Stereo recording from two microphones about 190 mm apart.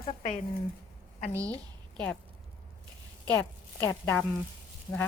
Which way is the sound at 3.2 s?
10° left (ahead or behind).